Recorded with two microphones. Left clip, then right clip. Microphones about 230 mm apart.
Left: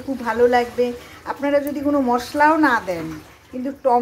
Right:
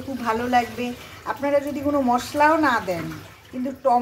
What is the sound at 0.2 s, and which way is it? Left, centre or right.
A woman's voice, centre.